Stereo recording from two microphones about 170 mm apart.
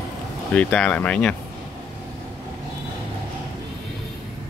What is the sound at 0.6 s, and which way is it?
Speech, 5° left (ahead or behind).